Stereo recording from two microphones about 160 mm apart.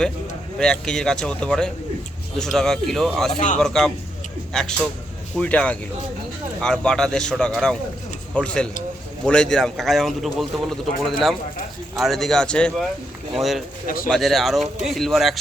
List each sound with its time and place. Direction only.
0.6 s a man's voice: 5° left (ahead or behind)
13.8 s speech: 60° left (ahead or behind)
14.1 s a man's voice: centre (ahead or behind)